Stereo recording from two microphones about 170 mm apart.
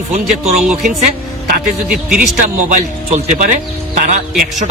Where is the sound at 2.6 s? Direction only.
45° right (ahead or behind).